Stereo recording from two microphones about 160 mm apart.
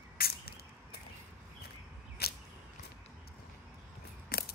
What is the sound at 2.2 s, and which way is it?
Whip, 80° left.